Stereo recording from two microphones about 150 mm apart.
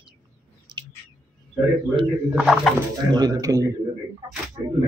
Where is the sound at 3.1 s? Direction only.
25° right (ahead or behind).